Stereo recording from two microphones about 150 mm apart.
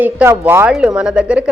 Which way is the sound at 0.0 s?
10° right (ahead or behind).